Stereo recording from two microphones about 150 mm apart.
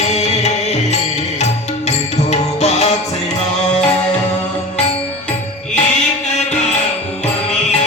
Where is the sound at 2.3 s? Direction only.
50° left (ahead or behind).